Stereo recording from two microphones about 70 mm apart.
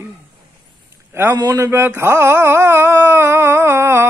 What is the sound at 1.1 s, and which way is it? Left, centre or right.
A man's voice, right.